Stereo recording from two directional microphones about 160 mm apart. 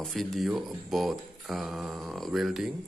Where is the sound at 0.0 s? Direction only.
Centre (ahead or behind).